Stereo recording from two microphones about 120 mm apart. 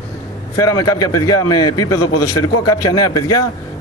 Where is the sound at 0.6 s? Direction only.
30° left (ahead or behind).